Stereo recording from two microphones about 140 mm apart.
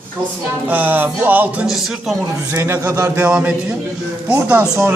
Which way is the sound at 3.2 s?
10° right (ahead or behind).